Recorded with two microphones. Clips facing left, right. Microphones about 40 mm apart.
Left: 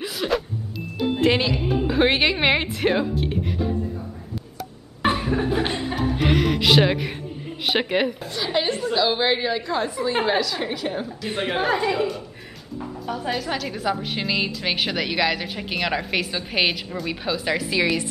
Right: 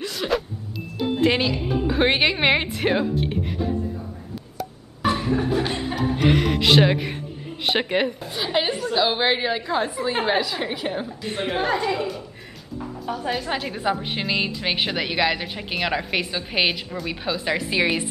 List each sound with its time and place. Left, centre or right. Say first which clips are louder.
0.0 s vehicle: even; centre
1.2 s speech: even; centre
5.1 s laughter: right 1 dB; centre
5.7 s speech: even; centre
8.5 s a woman's voice: even; centre
11.2 s a woman's voice: left 1 dB; centre
13.5 s a woman's voice: right 1 dB; centre